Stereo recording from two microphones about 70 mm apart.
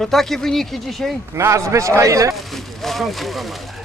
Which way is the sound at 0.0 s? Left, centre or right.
Centre.